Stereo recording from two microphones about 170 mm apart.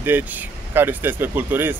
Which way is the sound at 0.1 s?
10° right (ahead or behind).